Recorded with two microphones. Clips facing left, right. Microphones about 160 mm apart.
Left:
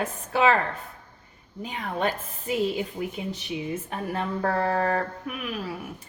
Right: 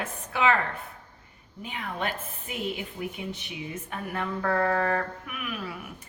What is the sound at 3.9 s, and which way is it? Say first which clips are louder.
Speech: even; 30° left (ahead or behind).